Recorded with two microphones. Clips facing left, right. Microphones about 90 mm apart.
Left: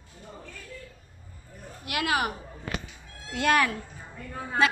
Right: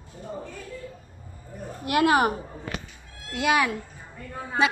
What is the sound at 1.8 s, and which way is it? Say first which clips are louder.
Speech: right 7 dB; 35° right (ahead or behind).